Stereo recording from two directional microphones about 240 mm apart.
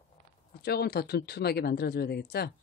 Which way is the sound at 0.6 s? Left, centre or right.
Left.